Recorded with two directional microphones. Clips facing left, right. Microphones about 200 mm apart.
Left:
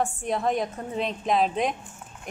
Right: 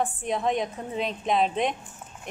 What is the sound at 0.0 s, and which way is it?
Speech, centre (ahead or behind).